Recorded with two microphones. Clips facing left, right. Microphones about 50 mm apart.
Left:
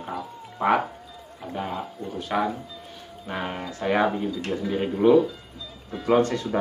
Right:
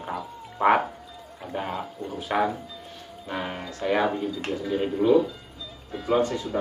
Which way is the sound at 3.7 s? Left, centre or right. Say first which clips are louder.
Left 1 dB; left.